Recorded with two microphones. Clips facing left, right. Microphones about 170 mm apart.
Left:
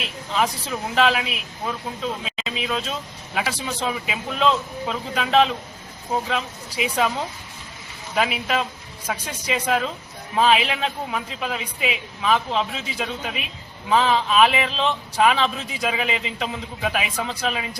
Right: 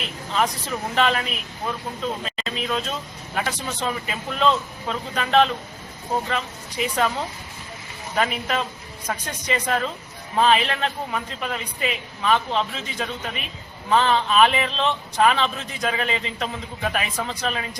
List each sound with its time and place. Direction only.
0.0 s a man's voice: centre (ahead or behind)